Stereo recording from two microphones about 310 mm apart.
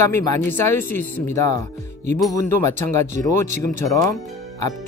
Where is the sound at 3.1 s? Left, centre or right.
Right.